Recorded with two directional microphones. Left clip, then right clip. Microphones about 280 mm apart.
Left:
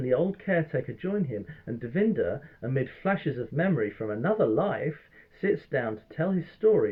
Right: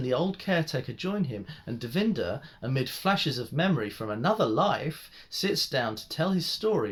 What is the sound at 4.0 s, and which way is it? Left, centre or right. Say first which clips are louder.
Speech: left 1 dB; right.